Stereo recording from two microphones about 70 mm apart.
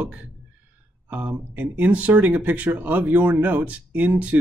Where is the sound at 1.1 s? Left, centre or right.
Right.